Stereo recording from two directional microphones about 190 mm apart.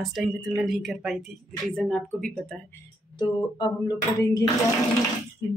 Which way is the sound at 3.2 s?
20° left (ahead or behind).